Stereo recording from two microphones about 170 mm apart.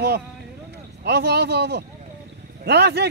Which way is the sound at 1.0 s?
80° right.